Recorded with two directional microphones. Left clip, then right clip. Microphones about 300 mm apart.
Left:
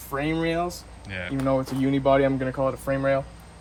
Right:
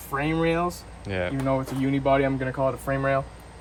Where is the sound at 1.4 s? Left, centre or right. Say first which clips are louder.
Left 5 dB; centre.